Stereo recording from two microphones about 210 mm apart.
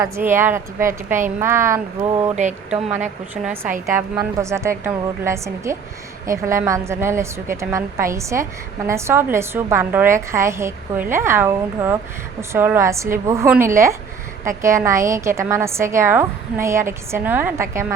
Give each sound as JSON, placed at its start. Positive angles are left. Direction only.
{"t": 0.0, "sound": "a woman's voice", "side_deg": -10}
{"t": 2.3, "sound": "speech", "side_deg": -35}
{"t": 3.4, "sound": "a woman's voice", "side_deg": -10}